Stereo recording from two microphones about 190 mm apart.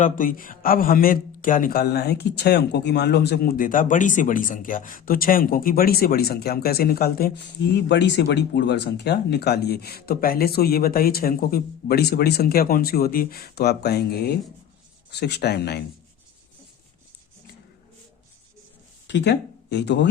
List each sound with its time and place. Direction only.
0.0 s speech: 45° left (ahead or behind)
19.0 s speech: 65° left (ahead or behind)